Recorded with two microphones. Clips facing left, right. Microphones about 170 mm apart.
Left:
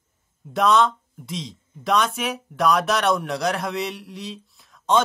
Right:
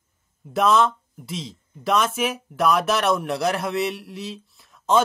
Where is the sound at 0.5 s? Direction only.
Centre (ahead or behind).